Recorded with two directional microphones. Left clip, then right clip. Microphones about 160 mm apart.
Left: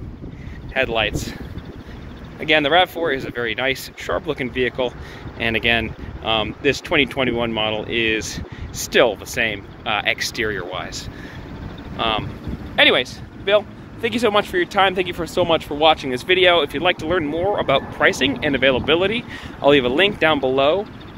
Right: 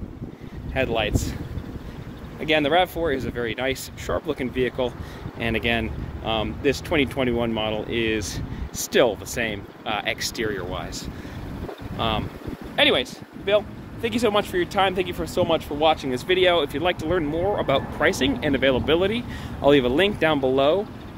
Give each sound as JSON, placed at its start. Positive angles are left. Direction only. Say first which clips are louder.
{"t": 0.7, "sound": "speech", "louder": "left 4 dB", "side_deg": -15}
{"t": 2.4, "sound": "speech", "louder": "left 4 dB", "side_deg": -10}
{"t": 12.7, "sound": "speech", "louder": "left 5 dB", "side_deg": 10}
{"t": 16.0, "sound": "speech", "louder": "left 4 dB", "side_deg": -5}